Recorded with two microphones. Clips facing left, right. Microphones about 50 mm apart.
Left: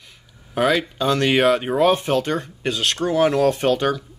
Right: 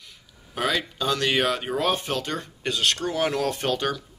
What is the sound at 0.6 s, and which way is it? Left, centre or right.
Speech, centre.